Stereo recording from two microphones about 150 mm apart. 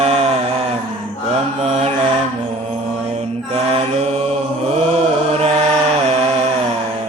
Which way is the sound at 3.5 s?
45° right (ahead or behind).